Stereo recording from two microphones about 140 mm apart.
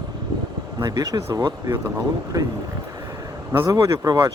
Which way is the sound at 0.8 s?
25° right (ahead or behind).